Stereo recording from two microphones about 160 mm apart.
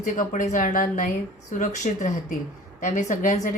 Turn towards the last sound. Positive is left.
turn(degrees=55)  # may be behind; listen again after turning